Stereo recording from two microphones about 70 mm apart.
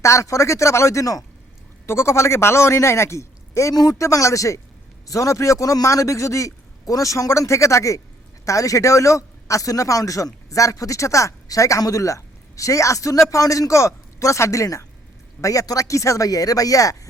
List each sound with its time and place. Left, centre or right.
0.0 s a man's voice: left
1.9 s a man's voice: left